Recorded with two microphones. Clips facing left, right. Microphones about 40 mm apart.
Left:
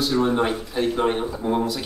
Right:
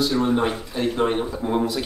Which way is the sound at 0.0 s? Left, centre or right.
Centre.